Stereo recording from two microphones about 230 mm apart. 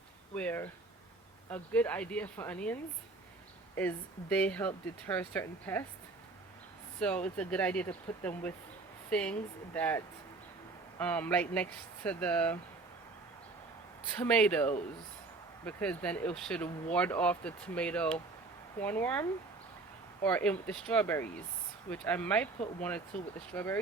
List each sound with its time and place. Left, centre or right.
0.3 s speech: centre
3.8 s speech: centre
7.0 s speech: centre
14.2 s speech: centre